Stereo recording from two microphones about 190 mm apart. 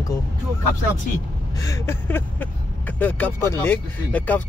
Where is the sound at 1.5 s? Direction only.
15° left (ahead or behind).